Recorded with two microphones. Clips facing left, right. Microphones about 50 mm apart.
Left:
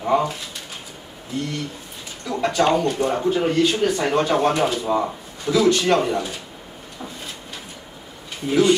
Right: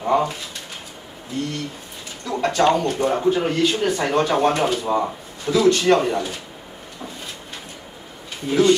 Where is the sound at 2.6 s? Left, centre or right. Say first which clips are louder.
Right 2 dB; left.